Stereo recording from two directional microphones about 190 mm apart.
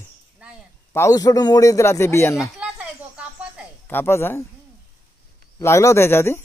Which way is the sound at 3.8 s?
10° left (ahead or behind).